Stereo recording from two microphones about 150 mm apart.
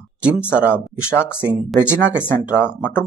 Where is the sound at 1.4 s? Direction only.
10° right (ahead or behind).